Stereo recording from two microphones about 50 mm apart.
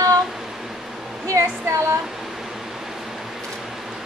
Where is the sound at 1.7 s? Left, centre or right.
Right.